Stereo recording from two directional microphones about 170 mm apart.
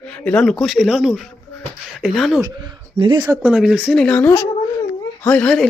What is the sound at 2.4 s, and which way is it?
Speech, 25° right (ahead or behind).